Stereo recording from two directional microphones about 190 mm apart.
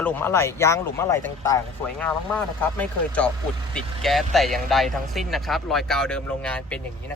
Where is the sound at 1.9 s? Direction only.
5° left (ahead or behind).